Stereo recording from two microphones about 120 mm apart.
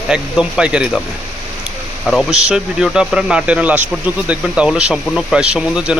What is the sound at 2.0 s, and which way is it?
Speech, centre (ahead or behind).